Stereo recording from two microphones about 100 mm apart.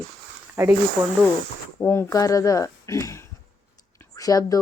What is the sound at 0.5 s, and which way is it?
Speech, 25° right (ahead or behind).